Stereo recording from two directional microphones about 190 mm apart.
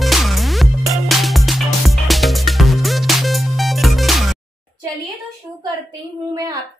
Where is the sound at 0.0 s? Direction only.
Centre (ahead or behind).